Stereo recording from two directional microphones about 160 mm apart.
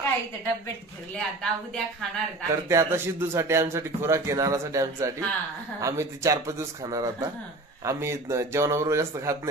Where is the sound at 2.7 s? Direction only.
15° right (ahead or behind).